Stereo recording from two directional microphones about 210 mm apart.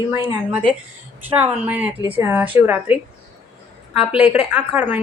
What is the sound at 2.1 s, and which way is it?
Speech, 10° right (ahead or behind).